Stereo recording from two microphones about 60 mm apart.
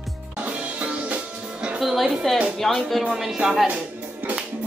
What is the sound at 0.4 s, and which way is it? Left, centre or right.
Music, right.